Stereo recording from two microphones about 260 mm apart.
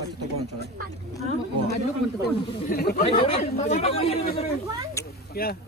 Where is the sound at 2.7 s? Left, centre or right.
Left.